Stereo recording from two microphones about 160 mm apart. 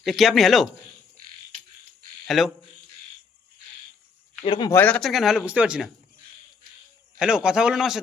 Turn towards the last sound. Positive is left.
turn(degrees=-5)  # may be behind; listen again after turning